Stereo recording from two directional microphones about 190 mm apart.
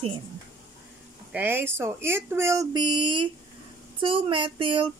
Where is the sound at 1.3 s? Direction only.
10° right (ahead or behind).